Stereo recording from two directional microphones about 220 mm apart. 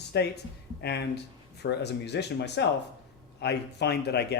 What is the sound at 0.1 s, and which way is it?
Speech, 50° left (ahead or behind).